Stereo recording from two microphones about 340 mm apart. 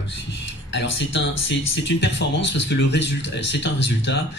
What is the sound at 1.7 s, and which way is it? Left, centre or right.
Speech, left.